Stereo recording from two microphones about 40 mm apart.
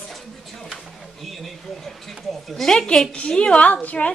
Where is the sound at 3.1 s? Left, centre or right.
Left.